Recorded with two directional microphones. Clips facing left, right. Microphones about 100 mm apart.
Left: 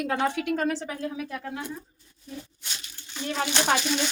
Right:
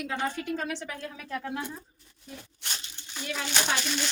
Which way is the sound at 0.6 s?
35° left (ahead or behind).